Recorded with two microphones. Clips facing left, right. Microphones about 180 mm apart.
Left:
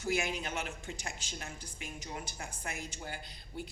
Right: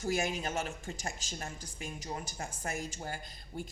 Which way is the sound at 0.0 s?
40° right (ahead or behind).